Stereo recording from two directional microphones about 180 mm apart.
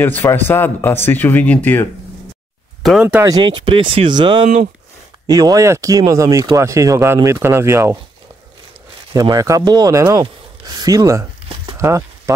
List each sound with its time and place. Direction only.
0.0 s speech: 10° left (ahead or behind)
2.8 s speech: 5° right (ahead or behind)
3.3 s speech: 25° right (ahead or behind)
9.1 s speech: 20° right (ahead or behind)
11.7 s a sound: 15° right (ahead or behind)